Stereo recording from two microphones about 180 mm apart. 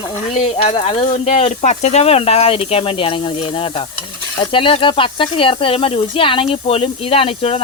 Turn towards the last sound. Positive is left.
turn(degrees=30)  # may be behind; listen again after turning